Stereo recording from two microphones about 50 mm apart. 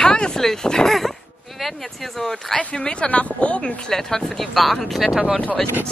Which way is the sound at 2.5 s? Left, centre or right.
Centre.